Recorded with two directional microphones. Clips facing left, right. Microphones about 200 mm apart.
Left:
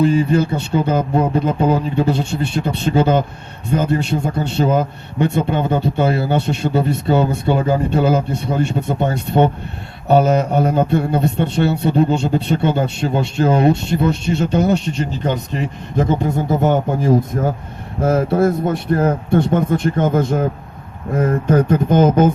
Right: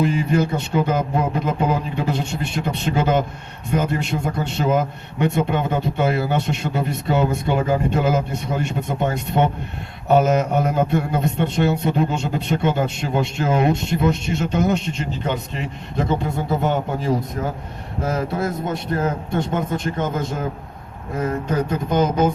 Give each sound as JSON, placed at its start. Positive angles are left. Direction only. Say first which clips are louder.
{"t": 0.0, "sound": "a man's voice", "louder": "left 4 dB", "side_deg": 30}